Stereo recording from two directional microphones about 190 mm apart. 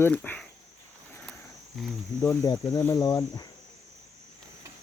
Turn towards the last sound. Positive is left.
turn(degrees=20)  # may be behind; listen again after turning